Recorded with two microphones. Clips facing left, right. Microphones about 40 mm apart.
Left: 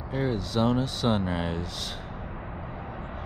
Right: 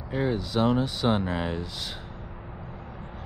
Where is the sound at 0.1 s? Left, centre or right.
Centre.